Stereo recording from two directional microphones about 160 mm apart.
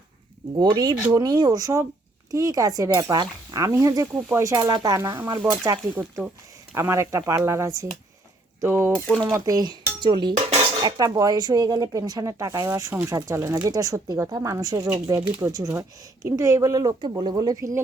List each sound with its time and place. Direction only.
0.6 s speech: 25° right (ahead or behind)
6.7 s speech: 15° right (ahead or behind)
8.9 s speech: 10° left (ahead or behind)
9.2 s speech: 20° right (ahead or behind)